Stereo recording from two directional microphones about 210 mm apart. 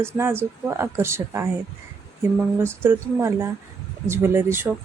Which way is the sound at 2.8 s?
10° right (ahead or behind).